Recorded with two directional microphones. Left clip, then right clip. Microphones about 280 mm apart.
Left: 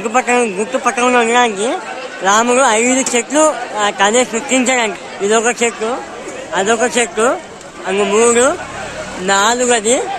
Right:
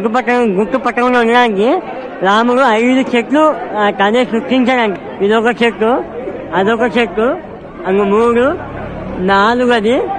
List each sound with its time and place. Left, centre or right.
0.1 s a man's voice: centre